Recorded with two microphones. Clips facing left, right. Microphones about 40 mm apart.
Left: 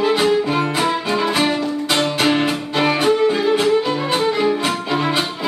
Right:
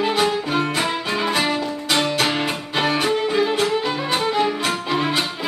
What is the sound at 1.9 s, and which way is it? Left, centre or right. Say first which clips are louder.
Music: even; left.